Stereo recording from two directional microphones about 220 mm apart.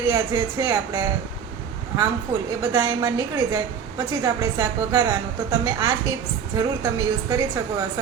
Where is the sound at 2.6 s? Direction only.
15° right (ahead or behind).